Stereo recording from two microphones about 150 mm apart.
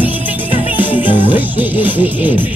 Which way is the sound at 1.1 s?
35° left (ahead or behind).